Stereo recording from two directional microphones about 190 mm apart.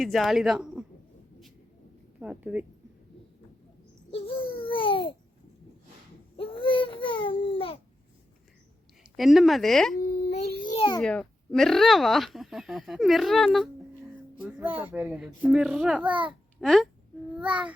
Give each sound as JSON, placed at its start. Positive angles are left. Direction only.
{"t": 0.0, "sound": "speech", "side_deg": 0}
{"t": 2.1, "sound": "speech", "side_deg": -5}
{"t": 4.1, "sound": "babbling", "side_deg": 30}
{"t": 6.3, "sound": "baby cry", "side_deg": 30}
{"t": 9.1, "sound": "speech", "side_deg": 0}
{"t": 10.5, "sound": "a sound", "side_deg": 45}
{"t": 10.8, "sound": "a sound", "side_deg": 25}
{"t": 11.0, "sound": "a child's voice", "side_deg": 5}